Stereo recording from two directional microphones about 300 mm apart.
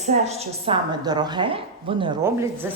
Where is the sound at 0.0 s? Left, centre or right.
Right.